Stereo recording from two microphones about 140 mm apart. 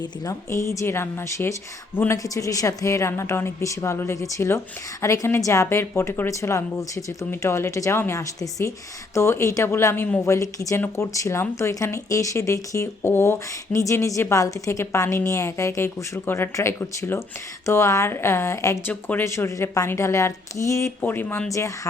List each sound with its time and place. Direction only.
0.0 s a woman's voice: 20° left (ahead or behind)